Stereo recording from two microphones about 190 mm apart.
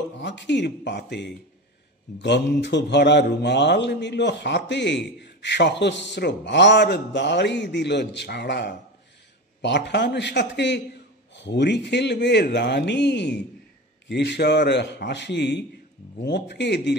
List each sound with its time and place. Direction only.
0.2 s speech: 65° left (ahead or behind)